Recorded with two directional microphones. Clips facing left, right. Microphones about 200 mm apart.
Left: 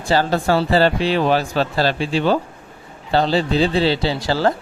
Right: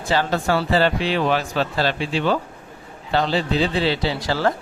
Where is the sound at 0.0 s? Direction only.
35° left (ahead or behind).